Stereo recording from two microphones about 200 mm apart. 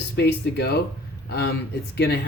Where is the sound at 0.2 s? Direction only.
55° left (ahead or behind).